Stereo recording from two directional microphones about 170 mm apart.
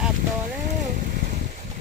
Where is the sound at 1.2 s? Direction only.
45° right (ahead or behind).